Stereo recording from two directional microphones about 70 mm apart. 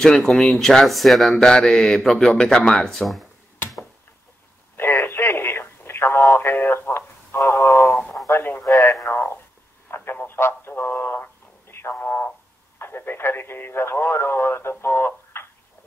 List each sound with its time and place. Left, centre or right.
0.0 s speech: centre
1.3 s speech: centre
4.7 s radio: left
8.6 s radio: left
9.1 s radio: left
9.8 s a sound: left
11.9 s radio: left
12.7 s a sound: left